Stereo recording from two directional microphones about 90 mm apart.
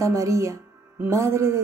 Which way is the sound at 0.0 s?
35° right (ahead or behind).